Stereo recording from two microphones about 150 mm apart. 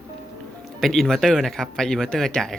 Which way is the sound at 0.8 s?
Centre (ahead or behind).